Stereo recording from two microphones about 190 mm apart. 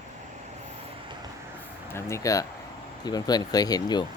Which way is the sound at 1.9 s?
15° left (ahead or behind).